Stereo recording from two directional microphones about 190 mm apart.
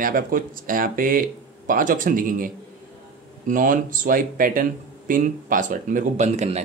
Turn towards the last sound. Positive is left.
turn(degrees=-40)  # may be behind; listen again after turning